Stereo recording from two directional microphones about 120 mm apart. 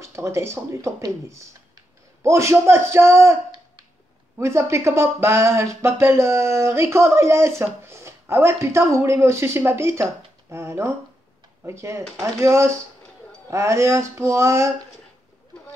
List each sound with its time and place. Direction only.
0.1 s speech: 20° right (ahead or behind)
4.4 s speech: 20° right (ahead or behind)